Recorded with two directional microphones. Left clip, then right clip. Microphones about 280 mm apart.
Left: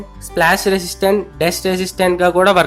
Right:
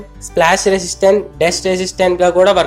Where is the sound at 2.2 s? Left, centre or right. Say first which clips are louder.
Right 1 dB; left.